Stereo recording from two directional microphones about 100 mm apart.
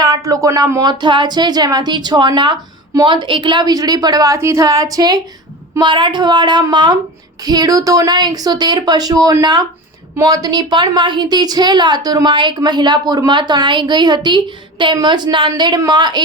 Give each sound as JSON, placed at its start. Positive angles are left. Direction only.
{"t": 0.3, "sound": "a woman's voice", "side_deg": -35}
{"t": 5.8, "sound": "a woman's voice", "side_deg": -50}